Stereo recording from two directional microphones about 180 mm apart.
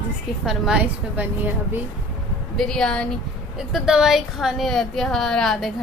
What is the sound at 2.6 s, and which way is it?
A woman's voice, 5° left (ahead or behind).